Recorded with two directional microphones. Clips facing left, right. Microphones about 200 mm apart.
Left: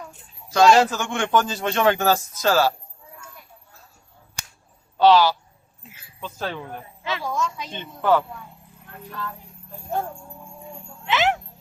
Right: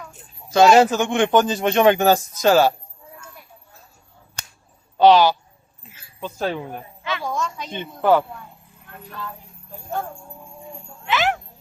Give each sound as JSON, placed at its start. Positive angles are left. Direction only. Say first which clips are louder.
{"t": 0.5, "sound": "a man's voice", "louder": "right 3 dB", "side_deg": -20}
{"t": 4.9, "sound": "a man's voice", "louder": "right 2 dB", "side_deg": -20}
{"t": 7.3, "sound": "a woman's voice", "louder": "left 1 dB", "side_deg": 5}
{"t": 7.7, "sound": "speech", "louder": "right 3 dB", "side_deg": -15}
{"t": 11.0, "sound": "music", "louder": "even", "side_deg": 20}